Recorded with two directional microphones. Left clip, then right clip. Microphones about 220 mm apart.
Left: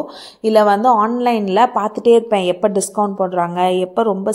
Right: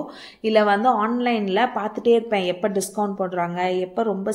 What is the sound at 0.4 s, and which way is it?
A woman's voice, 25° left (ahead or behind).